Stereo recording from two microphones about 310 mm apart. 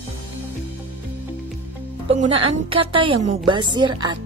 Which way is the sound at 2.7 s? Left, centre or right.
Centre.